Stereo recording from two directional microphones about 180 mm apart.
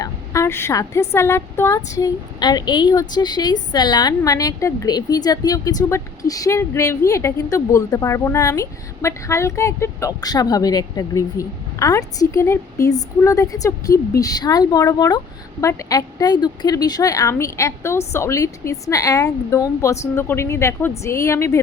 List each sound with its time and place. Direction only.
0.0 s a woman's voice: 15° left (ahead or behind)